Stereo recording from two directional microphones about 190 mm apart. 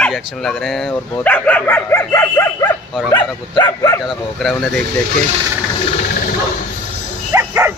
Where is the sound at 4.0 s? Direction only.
Centre (ahead or behind).